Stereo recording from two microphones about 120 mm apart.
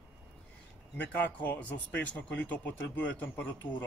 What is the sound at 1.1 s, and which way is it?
Speech, 15° left (ahead or behind).